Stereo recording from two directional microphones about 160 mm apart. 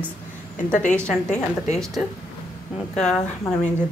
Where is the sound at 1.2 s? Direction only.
45° left (ahead or behind).